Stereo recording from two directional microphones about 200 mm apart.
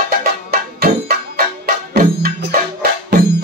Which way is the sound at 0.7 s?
50° right (ahead or behind).